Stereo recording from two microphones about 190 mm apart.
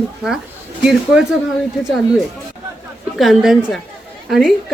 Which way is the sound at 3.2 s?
Centre (ahead or behind).